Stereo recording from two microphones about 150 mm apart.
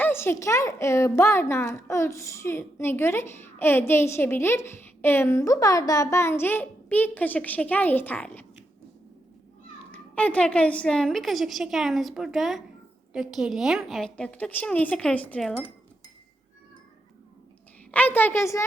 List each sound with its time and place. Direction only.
0.0 s a child's voice: 15° left (ahead or behind)
9.9 s a woman's voice: 10° left (ahead or behind)
17.9 s a child's voice: 10° left (ahead or behind)